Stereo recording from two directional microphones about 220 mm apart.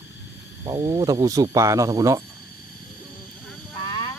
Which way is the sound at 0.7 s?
20° right (ahead or behind).